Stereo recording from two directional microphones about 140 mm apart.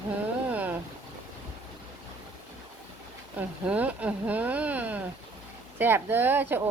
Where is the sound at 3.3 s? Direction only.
10° right (ahead or behind).